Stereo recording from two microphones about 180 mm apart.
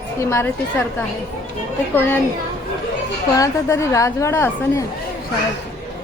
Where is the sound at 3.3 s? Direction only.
15° left (ahead or behind).